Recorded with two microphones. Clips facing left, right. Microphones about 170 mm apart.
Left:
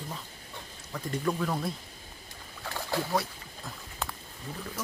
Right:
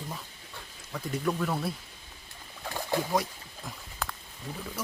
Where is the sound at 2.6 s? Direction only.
15° right (ahead or behind).